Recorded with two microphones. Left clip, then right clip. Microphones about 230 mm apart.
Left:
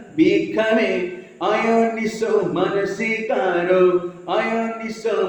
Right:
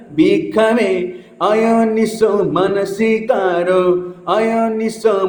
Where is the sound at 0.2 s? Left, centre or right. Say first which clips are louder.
Right 5 dB; right.